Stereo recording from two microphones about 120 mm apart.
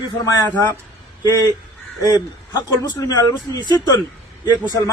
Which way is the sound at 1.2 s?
30° left (ahead or behind).